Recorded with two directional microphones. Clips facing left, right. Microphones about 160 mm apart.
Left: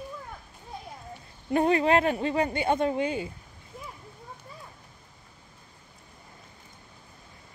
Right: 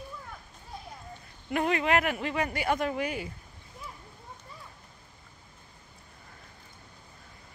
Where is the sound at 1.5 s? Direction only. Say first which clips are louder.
Left 4 dB; 30° left (ahead or behind).